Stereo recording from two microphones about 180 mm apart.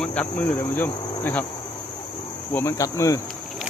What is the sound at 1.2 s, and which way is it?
Insect, 10° left (ahead or behind).